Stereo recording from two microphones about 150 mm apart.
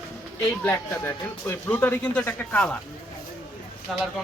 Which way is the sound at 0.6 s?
15° left (ahead or behind).